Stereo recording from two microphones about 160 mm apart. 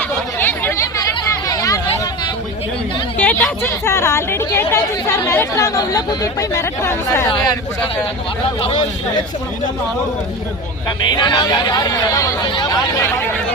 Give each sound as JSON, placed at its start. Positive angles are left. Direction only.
{"t": 0.3, "sound": "chatter", "side_deg": 15}
{"t": 1.5, "sound": "hubbub", "side_deg": 20}
{"t": 3.2, "sound": "speech", "side_deg": 10}
{"t": 10.8, "sound": "speech", "side_deg": 25}